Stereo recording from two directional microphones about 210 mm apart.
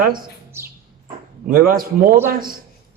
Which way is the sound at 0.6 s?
10° right (ahead or behind).